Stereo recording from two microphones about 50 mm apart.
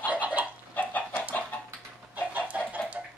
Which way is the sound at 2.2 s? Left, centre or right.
Right.